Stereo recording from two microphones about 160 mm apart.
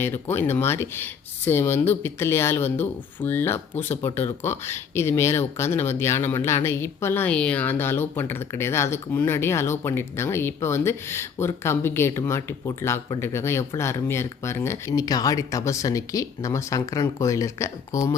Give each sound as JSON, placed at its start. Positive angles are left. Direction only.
{"t": 0.0, "sound": "speech", "side_deg": 15}